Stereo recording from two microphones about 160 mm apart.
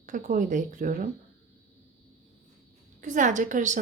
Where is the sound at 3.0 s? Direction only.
50° right (ahead or behind).